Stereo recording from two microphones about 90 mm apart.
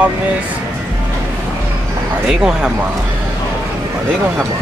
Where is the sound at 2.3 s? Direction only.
10° right (ahead or behind).